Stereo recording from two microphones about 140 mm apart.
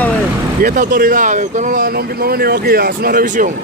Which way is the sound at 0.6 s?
75° right (ahead or behind).